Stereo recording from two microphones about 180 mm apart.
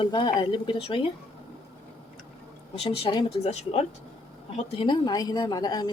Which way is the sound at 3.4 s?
35° left (ahead or behind).